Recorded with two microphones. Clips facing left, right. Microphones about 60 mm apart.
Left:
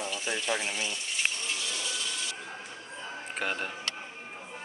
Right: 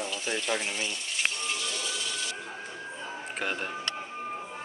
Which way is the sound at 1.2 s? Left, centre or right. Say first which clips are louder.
Right 2 dB; centre.